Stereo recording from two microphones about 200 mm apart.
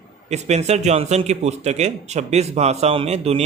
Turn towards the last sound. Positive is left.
turn(degrees=-30)  # may be behind; listen again after turning